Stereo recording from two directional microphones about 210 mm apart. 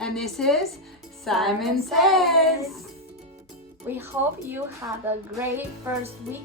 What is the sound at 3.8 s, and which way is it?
Speech, 10° right (ahead or behind).